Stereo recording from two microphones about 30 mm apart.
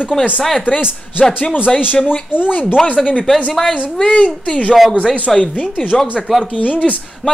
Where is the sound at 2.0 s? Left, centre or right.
Left.